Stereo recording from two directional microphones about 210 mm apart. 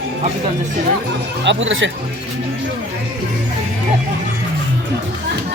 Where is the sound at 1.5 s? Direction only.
60° right (ahead or behind).